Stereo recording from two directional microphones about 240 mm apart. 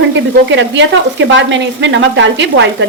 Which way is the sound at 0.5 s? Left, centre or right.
Right.